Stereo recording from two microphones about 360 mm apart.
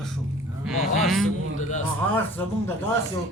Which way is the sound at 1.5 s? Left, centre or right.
Centre.